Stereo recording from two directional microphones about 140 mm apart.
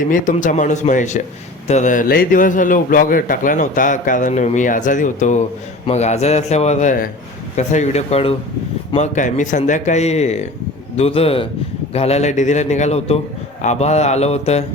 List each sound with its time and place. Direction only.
0.1 s a man's voice: 65° left (ahead or behind)
5.8 s a man's voice: 50° left (ahead or behind)
9.0 s a man's voice: 60° left (ahead or behind)